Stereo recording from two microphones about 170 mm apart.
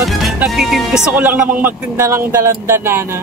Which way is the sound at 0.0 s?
Centre (ahead or behind).